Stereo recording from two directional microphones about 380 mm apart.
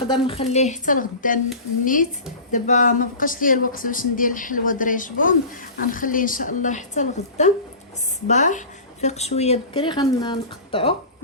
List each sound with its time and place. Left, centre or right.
0.1 s speech: centre